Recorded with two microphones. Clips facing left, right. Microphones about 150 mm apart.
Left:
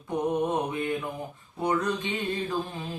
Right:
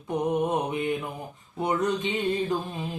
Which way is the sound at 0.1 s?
20° right (ahead or behind).